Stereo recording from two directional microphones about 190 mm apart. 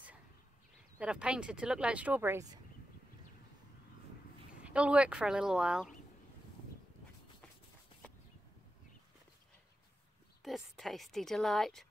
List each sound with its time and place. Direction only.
0.9 s speech: 5° right (ahead or behind)
4.6 s speech: 5° right (ahead or behind)
10.4 s speech: centre (ahead or behind)